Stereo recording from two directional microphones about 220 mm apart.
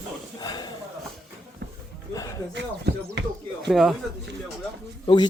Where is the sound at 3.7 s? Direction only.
Centre (ahead or behind).